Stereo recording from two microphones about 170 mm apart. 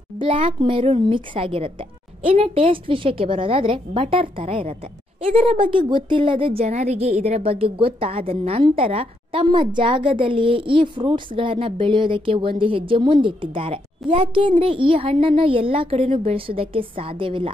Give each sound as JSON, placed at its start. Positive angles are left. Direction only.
{"t": 0.2, "sound": "a woman's voice", "side_deg": -30}